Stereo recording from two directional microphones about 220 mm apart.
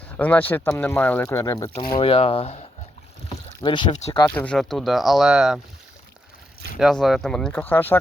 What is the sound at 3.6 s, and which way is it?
Speech, 20° left (ahead or behind).